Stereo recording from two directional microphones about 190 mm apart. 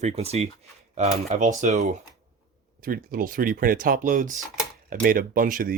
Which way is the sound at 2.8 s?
50° right (ahead or behind).